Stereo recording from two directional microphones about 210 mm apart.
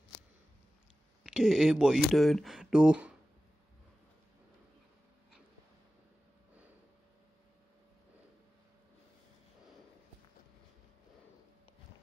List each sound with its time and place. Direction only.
1.2 s speech: 5° right (ahead or behind)